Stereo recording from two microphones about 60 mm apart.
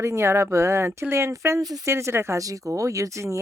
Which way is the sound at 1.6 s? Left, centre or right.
Right.